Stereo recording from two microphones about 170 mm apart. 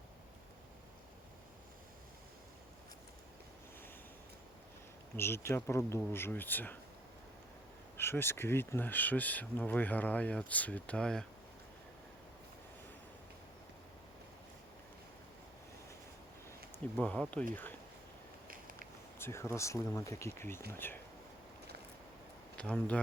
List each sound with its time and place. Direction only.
5.1 s speech: 15° left (ahead or behind)
7.9 s speech: 15° left (ahead or behind)
17.0 s speech: 5° left (ahead or behind)
18.4 s a sound: 55° right (ahead or behind)
19.2 s speech: 15° left (ahead or behind)
22.5 s speech: 5° left (ahead or behind)